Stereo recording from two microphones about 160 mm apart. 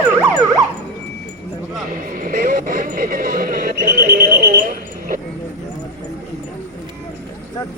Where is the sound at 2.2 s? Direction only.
65° right (ahead or behind).